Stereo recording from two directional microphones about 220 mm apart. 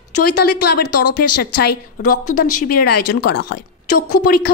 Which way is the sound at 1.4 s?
45° left (ahead or behind).